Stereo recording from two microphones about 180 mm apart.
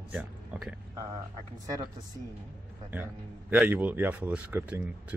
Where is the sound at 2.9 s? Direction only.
10° right (ahead or behind).